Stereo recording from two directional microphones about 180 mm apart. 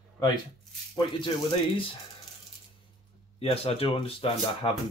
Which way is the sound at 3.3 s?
30° left (ahead or behind).